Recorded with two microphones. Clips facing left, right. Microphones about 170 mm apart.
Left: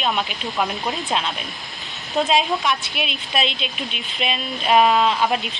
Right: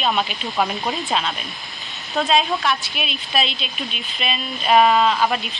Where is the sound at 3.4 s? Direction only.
70° left (ahead or behind).